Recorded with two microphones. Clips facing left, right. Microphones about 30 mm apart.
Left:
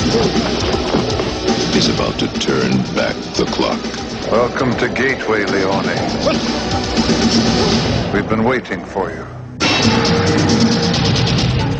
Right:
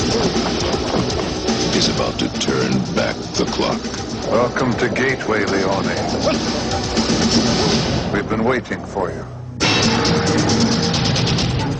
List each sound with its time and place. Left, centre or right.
0.0 s music: centre
1.5 s speech: centre
9.6 s music: centre